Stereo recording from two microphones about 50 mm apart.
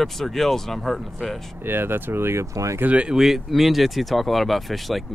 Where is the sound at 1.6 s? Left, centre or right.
Right.